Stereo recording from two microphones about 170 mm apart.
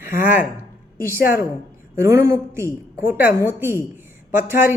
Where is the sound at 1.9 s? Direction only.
15° right (ahead or behind).